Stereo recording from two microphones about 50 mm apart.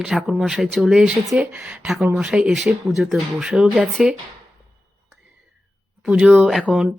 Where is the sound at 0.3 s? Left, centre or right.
Centre.